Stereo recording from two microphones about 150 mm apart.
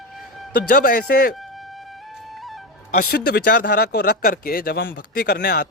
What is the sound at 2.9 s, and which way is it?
Speech, 90° left.